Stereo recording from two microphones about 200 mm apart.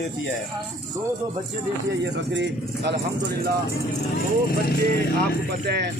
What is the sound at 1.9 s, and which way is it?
Speech, 60° right (ahead or behind).